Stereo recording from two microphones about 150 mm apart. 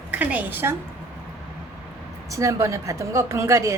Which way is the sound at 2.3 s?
20° right (ahead or behind).